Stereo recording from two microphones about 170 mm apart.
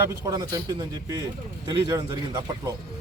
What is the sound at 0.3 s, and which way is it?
A man's voice, 20° right (ahead or behind).